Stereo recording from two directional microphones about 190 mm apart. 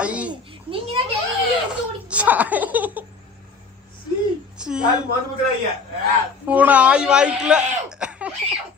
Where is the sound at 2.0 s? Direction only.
5° right (ahead or behind).